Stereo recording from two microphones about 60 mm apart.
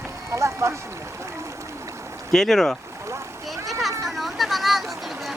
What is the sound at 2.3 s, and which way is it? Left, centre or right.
Speech, centre.